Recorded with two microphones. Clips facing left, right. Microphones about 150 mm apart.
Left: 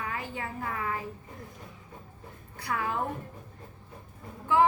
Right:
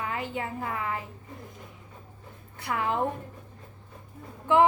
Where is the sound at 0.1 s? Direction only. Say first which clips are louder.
Right 4 dB; 20° right (ahead or behind).